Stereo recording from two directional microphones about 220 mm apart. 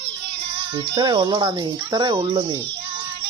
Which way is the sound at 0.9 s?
20° right (ahead or behind).